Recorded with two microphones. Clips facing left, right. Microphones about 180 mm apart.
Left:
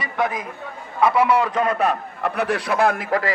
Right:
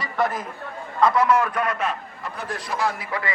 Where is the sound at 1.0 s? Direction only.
10° left (ahead or behind).